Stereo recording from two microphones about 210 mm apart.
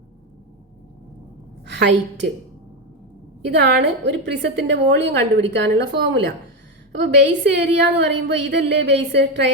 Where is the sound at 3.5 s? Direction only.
55° right (ahead or behind).